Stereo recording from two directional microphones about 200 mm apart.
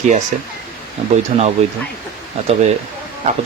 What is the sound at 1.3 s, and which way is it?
Speech, 35° right (ahead or behind).